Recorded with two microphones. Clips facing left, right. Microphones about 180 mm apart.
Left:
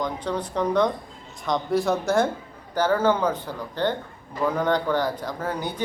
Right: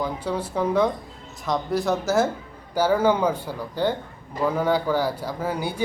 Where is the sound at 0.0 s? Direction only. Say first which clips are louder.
Right 1 dB; 5° right (ahead or behind).